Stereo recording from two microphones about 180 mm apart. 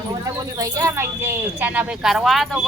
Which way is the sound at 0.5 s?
20° right (ahead or behind).